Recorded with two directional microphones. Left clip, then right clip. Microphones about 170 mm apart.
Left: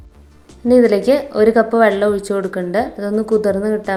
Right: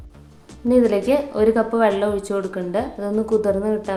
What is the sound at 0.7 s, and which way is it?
Speech, 25° left (ahead or behind).